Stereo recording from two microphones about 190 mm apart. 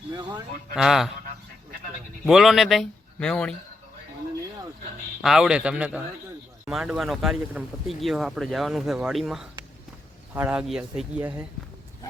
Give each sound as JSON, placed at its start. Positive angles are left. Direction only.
{"t": 0.1, "sound": "speech", "side_deg": -20}
{"t": 0.8, "sound": "speech", "side_deg": 0}
{"t": 2.2, "sound": "speech", "side_deg": 0}
{"t": 5.2, "sound": "speech", "side_deg": -5}